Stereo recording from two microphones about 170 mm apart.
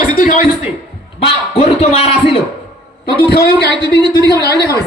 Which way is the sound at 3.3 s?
70° left (ahead or behind).